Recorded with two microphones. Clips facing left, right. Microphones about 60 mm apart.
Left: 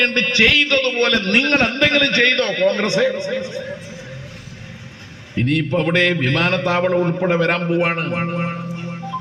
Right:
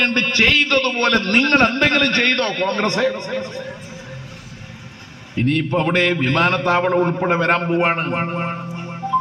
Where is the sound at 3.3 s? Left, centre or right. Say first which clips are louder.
Left 2 dB; right.